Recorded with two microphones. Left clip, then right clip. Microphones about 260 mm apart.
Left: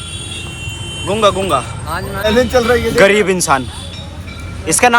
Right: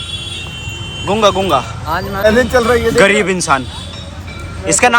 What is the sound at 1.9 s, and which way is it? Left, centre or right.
Speech, right.